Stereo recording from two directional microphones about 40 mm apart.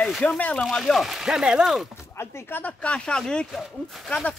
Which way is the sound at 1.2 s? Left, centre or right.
Centre.